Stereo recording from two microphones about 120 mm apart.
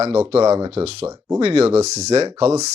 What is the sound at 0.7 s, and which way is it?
Speech, 55° right (ahead or behind).